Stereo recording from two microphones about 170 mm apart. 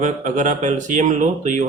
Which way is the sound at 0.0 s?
45° right (ahead or behind).